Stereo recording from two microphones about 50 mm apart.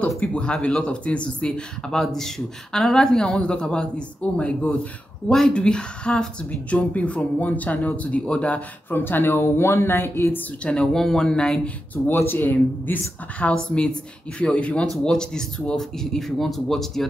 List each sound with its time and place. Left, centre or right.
0.2 s speech: left
1.9 s speech: centre; by 8.6 s left
8.9 s speech: left
10.6 s speech: centre
11.6 s speech: left
13.5 s speech: left; by 17.0 s centre